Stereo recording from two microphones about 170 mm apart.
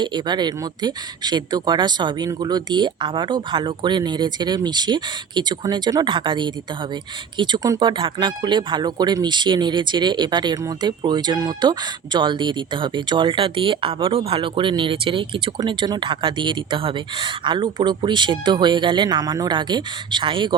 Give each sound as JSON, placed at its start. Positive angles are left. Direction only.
{"t": 0.0, "sound": "speech", "side_deg": -25}